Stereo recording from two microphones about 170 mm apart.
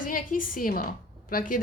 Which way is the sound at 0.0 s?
55° left (ahead or behind).